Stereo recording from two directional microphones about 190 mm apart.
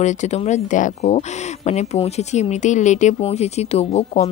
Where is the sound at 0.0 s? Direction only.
40° left (ahead or behind).